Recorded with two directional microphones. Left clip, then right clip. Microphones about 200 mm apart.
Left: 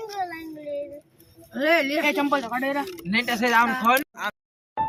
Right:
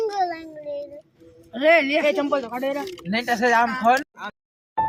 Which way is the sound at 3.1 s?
55° right (ahead or behind).